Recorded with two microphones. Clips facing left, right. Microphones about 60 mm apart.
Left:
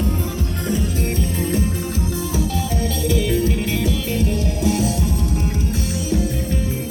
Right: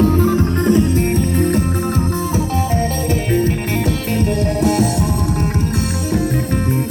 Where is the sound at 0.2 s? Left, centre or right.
Right.